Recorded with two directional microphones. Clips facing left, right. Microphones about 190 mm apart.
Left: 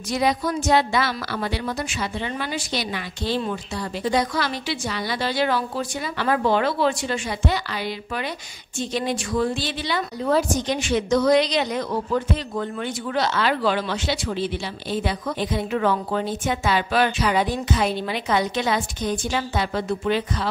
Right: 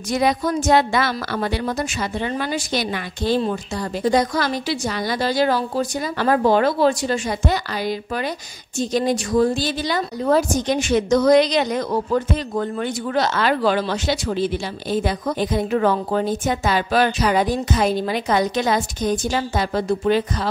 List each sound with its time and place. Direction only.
0.1 s a woman's voice: 50° right (ahead or behind)